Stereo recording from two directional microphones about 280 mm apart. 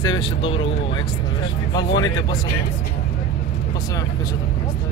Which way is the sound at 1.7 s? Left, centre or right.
Centre.